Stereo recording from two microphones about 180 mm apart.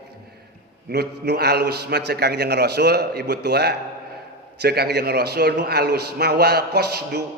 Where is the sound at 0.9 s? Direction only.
60° right (ahead or behind).